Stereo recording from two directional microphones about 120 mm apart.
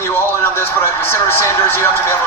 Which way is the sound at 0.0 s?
20° left (ahead or behind).